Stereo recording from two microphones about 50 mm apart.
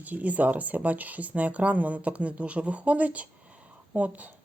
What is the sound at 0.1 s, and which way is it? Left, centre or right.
Speech, right.